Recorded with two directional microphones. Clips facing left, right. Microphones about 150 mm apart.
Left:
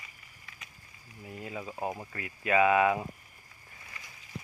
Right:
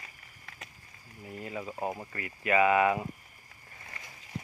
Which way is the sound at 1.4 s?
5° left (ahead or behind).